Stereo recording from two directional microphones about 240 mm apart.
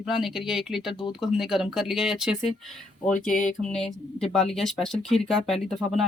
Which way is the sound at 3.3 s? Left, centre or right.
Left.